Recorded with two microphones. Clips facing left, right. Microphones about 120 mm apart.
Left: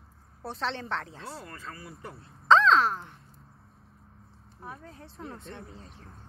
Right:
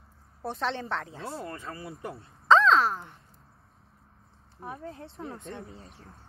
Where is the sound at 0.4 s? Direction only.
10° right (ahead or behind).